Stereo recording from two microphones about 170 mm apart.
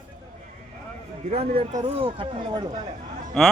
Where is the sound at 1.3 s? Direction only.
35° right (ahead or behind).